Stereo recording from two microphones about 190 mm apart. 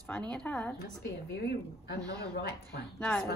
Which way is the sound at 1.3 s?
60° left (ahead or behind).